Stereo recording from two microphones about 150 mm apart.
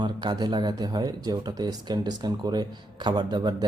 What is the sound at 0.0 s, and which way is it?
Speech, 30° right (ahead or behind).